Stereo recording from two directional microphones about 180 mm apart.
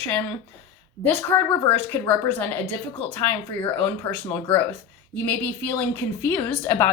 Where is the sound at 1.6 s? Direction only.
10° left (ahead or behind).